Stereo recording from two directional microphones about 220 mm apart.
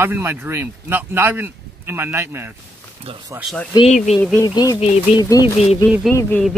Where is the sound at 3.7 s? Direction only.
30° left (ahead or behind).